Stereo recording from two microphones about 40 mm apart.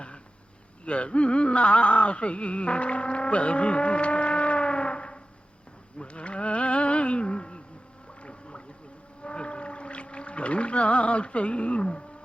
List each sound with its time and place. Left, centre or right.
0.9 s a sound: left
8.2 s gargling: left
9.2 s whale vocalization: left